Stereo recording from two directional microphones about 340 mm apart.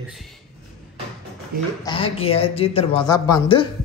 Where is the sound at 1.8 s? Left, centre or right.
Centre.